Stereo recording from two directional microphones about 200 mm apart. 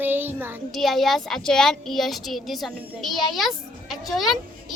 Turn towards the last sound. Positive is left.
turn(degrees=0)  # may be behind; listen again after turning